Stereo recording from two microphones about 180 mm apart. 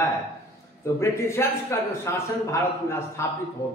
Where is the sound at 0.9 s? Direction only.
15° left (ahead or behind).